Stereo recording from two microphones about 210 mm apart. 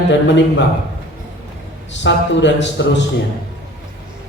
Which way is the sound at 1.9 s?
60° left (ahead or behind).